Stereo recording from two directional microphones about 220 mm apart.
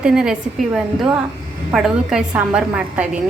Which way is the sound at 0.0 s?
5° right (ahead or behind).